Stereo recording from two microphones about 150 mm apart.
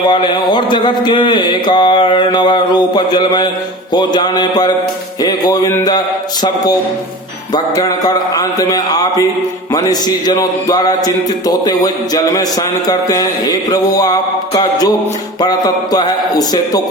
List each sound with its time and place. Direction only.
0.1 s mantra: 30° left (ahead or behind)
3.9 s speech: 30° left (ahead or behind)
7.5 s speech: 25° left (ahead or behind)